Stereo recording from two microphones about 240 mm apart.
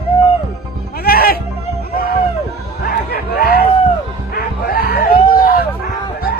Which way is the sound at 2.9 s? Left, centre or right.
Left.